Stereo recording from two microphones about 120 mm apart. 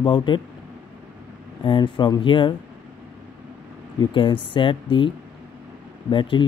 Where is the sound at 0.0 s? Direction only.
40° left (ahead or behind).